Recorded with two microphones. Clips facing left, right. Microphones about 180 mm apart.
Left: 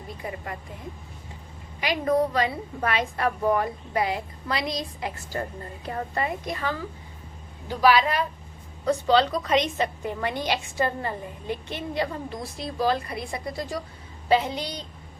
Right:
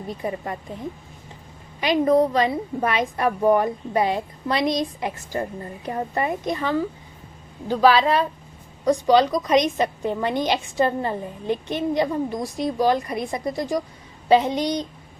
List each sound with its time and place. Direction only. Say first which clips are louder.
0.2 s a woman's voice: right 5 dB; 30° right (ahead or behind)
1.8 s a woman's voice: right 5 dB; 20° right (ahead or behind)
8.8 s a woman's voice: right 4 dB; 15° right (ahead or behind)